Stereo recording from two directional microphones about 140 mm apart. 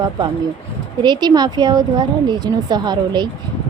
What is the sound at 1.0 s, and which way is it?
Speech, 30° right (ahead or behind).